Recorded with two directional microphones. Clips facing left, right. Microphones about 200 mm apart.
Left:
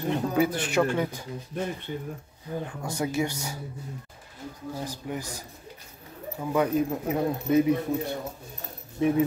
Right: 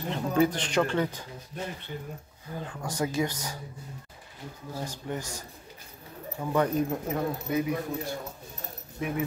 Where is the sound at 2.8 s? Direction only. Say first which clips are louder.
Even; 10° left (ahead or behind).